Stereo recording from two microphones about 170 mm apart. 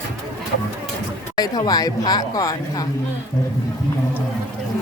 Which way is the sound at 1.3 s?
25° left (ahead or behind).